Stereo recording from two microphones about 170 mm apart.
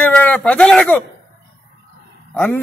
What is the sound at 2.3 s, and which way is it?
Speech, 10° left (ahead or behind).